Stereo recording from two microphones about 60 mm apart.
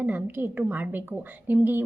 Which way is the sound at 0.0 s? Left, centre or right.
Right.